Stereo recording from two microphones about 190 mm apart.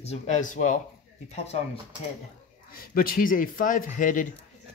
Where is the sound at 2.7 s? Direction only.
50° left (ahead or behind).